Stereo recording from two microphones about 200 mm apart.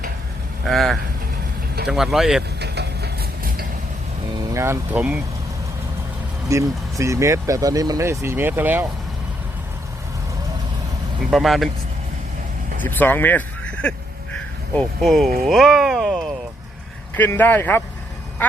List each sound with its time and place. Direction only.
0.6 s speech: centre (ahead or behind)
2.6 s a sound: 55° right (ahead or behind)
4.5 s speech: 15° right (ahead or behind)
6.5 s speech: 15° right (ahead or behind)
11.3 s speech: centre (ahead or behind)
12.8 s speech: 10° left (ahead or behind)